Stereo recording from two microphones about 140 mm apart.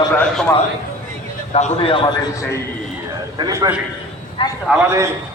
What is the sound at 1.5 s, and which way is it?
Speech, 45° left (ahead or behind).